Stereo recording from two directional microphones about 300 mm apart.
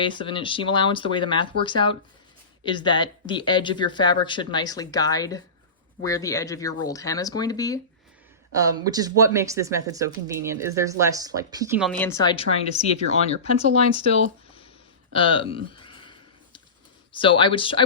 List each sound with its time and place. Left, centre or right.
0.2 s speech: centre
8.5 s speech: centre
11.9 s speech: centre
15.1 s speech: centre
15.5 s a sound: centre
17.1 s speech: centre